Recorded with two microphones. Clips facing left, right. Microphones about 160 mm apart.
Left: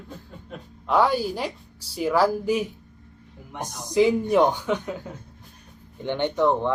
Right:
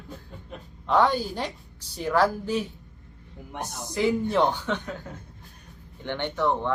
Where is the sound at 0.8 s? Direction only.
10° left (ahead or behind).